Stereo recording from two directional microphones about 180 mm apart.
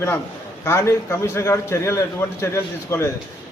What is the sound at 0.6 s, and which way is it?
A man's voice, 15° left (ahead or behind).